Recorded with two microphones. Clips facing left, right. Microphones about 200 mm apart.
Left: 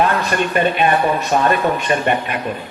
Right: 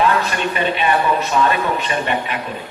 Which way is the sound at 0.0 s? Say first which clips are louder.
Left 1 dB; 50° left (ahead or behind).